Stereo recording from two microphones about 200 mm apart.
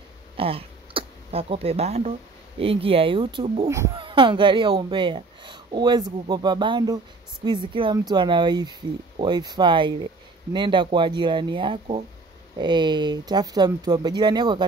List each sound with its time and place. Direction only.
0.4 s a woman's voice: 30° right (ahead or behind)
3.6 s speech: 15° right (ahead or behind)
4.0 s a woman's voice: 25° right (ahead or behind)